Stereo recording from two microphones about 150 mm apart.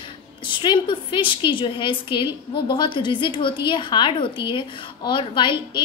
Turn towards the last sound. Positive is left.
turn(degrees=30)  # may be behind; listen again after turning